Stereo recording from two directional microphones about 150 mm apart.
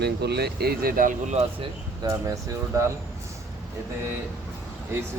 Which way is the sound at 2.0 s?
20° right (ahead or behind).